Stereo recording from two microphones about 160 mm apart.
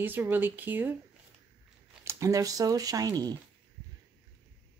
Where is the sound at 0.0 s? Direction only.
10° right (ahead or behind).